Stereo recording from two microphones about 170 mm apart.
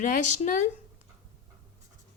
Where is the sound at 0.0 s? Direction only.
50° left (ahead or behind).